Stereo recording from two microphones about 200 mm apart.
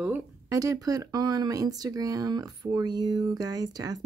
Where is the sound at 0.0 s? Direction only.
10° right (ahead or behind).